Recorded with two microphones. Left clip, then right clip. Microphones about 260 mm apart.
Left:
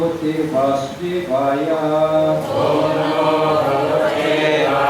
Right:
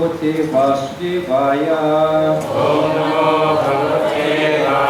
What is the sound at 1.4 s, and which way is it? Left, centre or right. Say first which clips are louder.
Mantra: right 2 dB; centre.